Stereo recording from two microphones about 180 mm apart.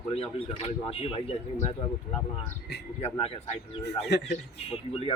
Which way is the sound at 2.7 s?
65° left (ahead or behind).